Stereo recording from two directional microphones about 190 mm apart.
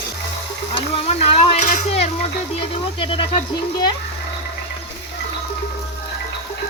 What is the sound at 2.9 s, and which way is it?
Speech, 25° left (ahead or behind).